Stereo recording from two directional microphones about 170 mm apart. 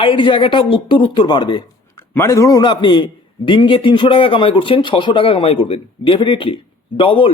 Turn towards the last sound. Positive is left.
turn(degrees=30)  # may be behind; listen again after turning